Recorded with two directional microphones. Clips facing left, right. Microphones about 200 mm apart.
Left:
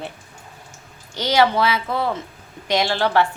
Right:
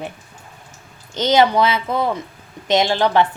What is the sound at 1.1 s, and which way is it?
A woman's voice, 20° right (ahead or behind).